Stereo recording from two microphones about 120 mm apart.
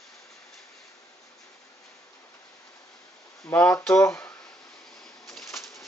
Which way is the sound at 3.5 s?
15° left (ahead or behind).